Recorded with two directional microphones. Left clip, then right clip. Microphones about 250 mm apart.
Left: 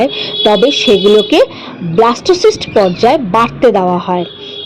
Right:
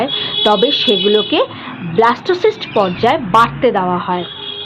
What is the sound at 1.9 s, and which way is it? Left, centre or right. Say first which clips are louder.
A woman's voice: left 3 dB; left.